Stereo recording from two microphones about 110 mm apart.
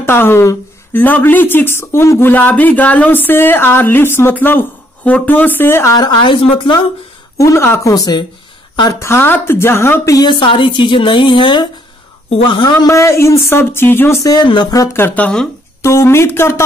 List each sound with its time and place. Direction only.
0.0 s speech: 20° left (ahead or behind)
5.9 s a woman's voice: 40° left (ahead or behind)
7.3 s speech: 25° left (ahead or behind)
7.9 s speech: 35° left (ahead or behind)
9.0 s speech: 20° left (ahead or behind)
10.1 s a woman's voice: 45° left (ahead or behind)
12.3 s a woman's voice: 60° left (ahead or behind)
12.8 s speech: 25° left (ahead or behind)
14.3 s speech: 45° left (ahead or behind)
14.9 s speech: 20° left (ahead or behind)
15.8 s speech: 25° left (ahead or behind)